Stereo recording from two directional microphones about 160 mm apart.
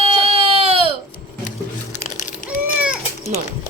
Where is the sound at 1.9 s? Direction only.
50° left (ahead or behind).